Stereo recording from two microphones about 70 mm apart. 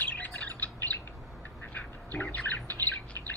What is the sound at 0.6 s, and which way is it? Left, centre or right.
Bird, left.